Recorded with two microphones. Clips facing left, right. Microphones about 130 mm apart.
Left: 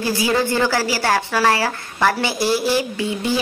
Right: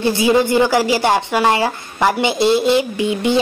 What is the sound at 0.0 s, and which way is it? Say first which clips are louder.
Speech: right 5 dB; 25° right (ahead or behind).